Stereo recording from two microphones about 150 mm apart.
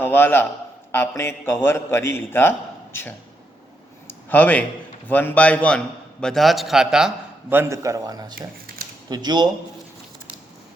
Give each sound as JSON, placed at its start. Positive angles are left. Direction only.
{"t": 0.0, "sound": "a man's voice", "side_deg": 15}
{"t": 4.0, "sound": "a sound", "side_deg": 10}
{"t": 5.0, "sound": "a man's voice", "side_deg": 10}
{"t": 7.5, "sound": "a man's voice", "side_deg": -15}